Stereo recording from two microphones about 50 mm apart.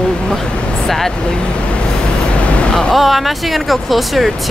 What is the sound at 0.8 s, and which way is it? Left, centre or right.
Speech, centre.